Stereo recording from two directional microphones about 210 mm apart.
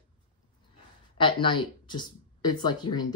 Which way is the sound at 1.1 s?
25° left (ahead or behind).